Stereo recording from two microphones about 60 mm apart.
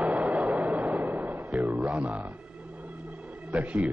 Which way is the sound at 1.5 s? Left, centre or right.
Centre.